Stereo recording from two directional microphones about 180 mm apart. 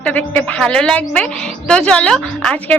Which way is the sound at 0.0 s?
10° left (ahead or behind).